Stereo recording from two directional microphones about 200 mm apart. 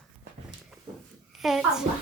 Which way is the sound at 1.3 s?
Centre (ahead or behind).